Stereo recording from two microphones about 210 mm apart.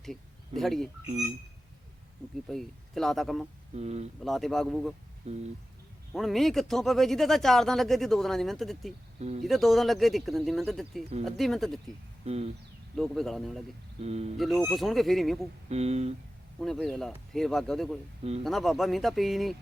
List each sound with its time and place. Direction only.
0.0 s speech: centre (ahead or behind)
2.5 s speech: centre (ahead or behind)
3.8 s speech: 30° right (ahead or behind)
4.2 s speech: centre (ahead or behind)
5.2 s a sound: 30° right (ahead or behind)
6.1 s speech: centre (ahead or behind)
12.2 s a sound: 30° right (ahead or behind)
13.0 s speech: centre (ahead or behind)
14.0 s speech: 30° right (ahead or behind)
14.3 s speech: centre (ahead or behind)
15.7 s speech: 30° right (ahead or behind)
16.6 s speech: centre (ahead or behind)
18.2 s speech: 30° right (ahead or behind)
18.4 s speech: centre (ahead or behind)